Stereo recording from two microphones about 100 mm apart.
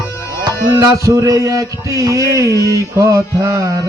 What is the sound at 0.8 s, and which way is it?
Music, 35° right (ahead or behind).